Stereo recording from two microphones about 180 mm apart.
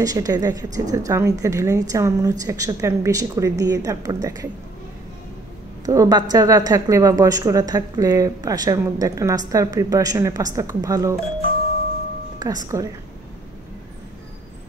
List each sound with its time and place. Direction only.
0.0 s a woman's voice: 20° right (ahead or behind)
5.9 s a woman's voice: 20° right (ahead or behind)
12.6 s a woman's voice: 20° right (ahead or behind)